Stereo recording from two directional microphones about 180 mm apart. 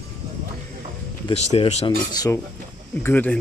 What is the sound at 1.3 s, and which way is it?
Speech, 35° left (ahead or behind).